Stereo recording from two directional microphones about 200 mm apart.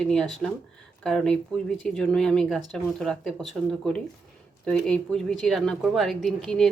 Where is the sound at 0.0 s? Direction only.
5° left (ahead or behind).